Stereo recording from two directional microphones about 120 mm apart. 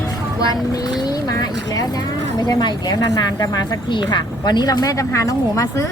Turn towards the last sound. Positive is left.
turn(degrees=25)  # may be behind; listen again after turning